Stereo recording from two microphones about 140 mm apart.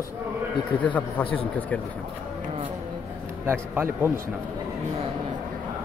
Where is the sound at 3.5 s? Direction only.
15° right (ahead or behind).